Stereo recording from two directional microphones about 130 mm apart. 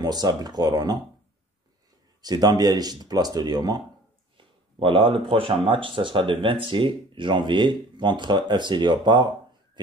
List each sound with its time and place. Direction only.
0.0 s speech: 30° right (ahead or behind)
2.2 s speech: 30° right (ahead or behind)
4.4 s speech: 40° right (ahead or behind)